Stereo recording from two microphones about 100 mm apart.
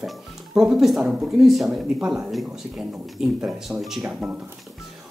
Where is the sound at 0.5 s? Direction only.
5° right (ahead or behind).